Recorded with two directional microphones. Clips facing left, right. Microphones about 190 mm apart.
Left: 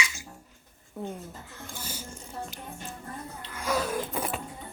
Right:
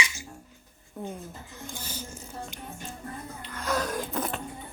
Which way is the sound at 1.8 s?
10° left (ahead or behind).